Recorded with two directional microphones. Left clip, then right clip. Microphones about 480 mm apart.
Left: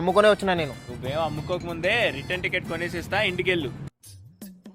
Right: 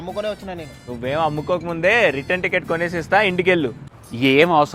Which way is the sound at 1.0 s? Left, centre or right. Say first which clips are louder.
Right 7 dB; right.